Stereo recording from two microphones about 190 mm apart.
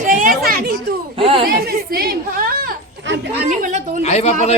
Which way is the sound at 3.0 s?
70° right (ahead or behind).